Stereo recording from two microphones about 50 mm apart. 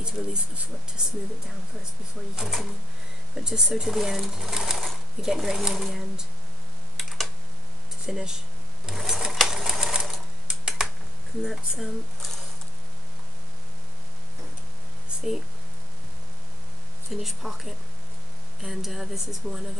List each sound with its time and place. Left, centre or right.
0.0 s speech: centre
2.3 s speech: centre
7.0 s computer keyboard: centre
8.1 s speech: centre
8.8 s sewing machine: centre
10.8 s a sound: centre
11.4 s speech: centre
15.0 s a sound: centre
17.1 s speech: centre